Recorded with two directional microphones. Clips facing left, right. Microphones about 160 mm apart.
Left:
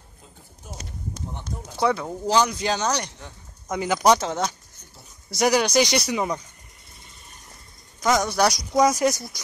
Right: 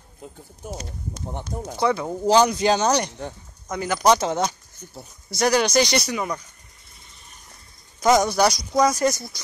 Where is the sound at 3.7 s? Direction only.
15° left (ahead or behind).